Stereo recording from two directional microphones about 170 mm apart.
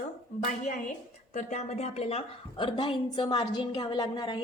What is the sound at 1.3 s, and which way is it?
A woman's voice, 40° left (ahead or behind).